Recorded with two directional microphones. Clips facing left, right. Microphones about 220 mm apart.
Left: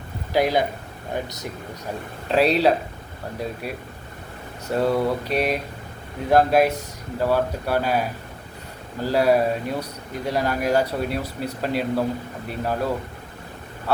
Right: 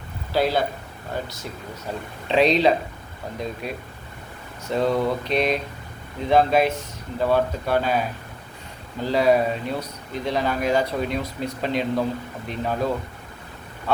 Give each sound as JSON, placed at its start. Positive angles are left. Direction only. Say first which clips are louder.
{"t": 0.3, "sound": "speech", "louder": "left 1 dB", "side_deg": 15}
{"t": 2.2, "sound": "speech", "louder": "even", "side_deg": 5}